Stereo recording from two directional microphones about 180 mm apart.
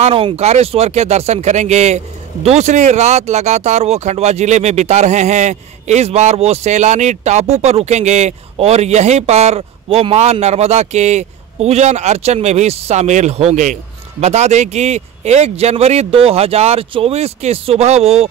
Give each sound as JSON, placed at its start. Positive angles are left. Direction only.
{"t": 0.0, "sound": "speech", "side_deg": -30}